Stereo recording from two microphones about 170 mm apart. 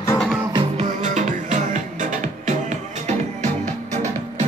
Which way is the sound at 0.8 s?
45° right (ahead or behind).